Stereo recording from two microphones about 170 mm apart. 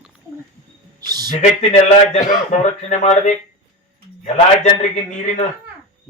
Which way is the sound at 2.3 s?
45° left (ahead or behind).